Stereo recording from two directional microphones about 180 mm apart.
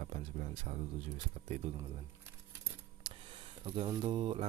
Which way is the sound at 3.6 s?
30° right (ahead or behind).